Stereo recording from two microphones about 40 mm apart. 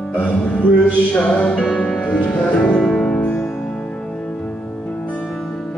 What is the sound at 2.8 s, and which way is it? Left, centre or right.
Music, centre.